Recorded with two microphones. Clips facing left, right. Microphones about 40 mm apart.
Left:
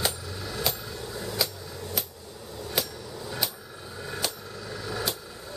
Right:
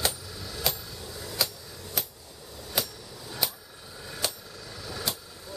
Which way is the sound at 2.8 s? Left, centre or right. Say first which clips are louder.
Left 1 dB; centre.